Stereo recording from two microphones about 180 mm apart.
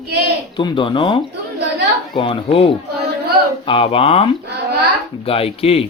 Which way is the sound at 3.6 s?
30° left (ahead or behind).